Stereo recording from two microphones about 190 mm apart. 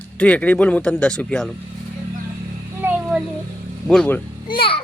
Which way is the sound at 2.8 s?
5° right (ahead or behind).